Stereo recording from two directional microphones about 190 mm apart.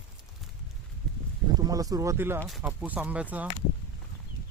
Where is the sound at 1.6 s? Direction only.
20° right (ahead or behind).